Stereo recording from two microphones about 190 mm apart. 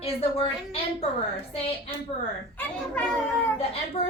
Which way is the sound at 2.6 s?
10° left (ahead or behind).